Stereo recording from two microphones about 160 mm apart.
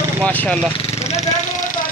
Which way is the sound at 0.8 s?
40° left (ahead or behind).